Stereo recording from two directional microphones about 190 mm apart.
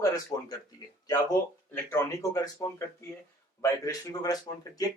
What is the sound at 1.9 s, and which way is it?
Speech, 15° left (ahead or behind).